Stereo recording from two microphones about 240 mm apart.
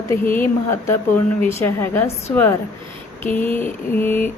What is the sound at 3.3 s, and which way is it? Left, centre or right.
Speech, centre.